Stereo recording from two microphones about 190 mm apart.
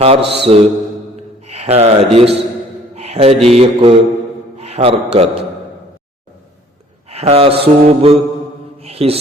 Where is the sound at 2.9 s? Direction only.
35° right (ahead or behind).